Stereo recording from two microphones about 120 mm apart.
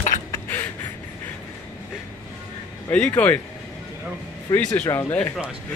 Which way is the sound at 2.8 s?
10° left (ahead or behind).